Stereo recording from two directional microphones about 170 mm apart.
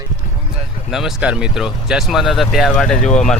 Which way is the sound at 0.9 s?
Centre (ahead or behind).